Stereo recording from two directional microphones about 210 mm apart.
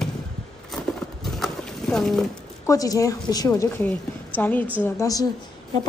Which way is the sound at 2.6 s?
15° left (ahead or behind).